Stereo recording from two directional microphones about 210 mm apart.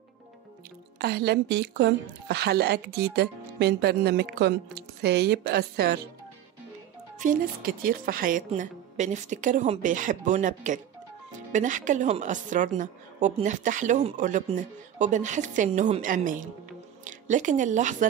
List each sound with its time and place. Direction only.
0.9 s a woman's voice: 50° right (ahead or behind)
7.2 s speech: 40° right (ahead or behind)